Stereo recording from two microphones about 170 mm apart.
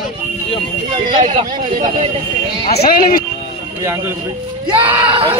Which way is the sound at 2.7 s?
70° left (ahead or behind).